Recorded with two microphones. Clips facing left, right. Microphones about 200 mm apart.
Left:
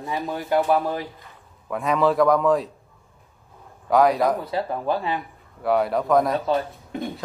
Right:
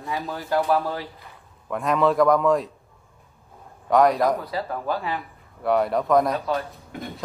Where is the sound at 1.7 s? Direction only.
Centre (ahead or behind).